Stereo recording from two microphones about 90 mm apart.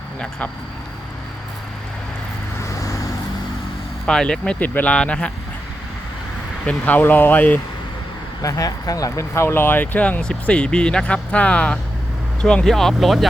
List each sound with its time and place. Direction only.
0.2 s speech: 15° left (ahead or behind)
4.0 s speech: 10° left (ahead or behind)
6.7 s speech: 20° left (ahead or behind)
8.4 s speech: 40° left (ahead or behind); by 13.2 s centre (ahead or behind)